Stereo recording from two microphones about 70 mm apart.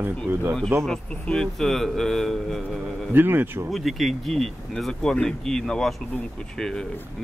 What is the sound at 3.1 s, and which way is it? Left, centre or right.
Speech, right.